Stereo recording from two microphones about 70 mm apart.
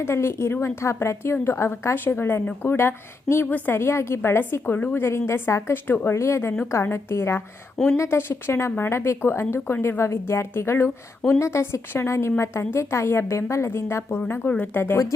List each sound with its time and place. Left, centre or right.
0.0 s a woman's voice: left
5.0 s a woman's voice: left
5.7 s a woman's voice: left
10.0 s a woman's voice: left